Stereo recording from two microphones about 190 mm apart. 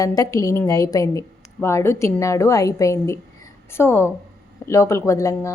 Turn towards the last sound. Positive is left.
turn(degrees=15)  # may be behind; listen again after turning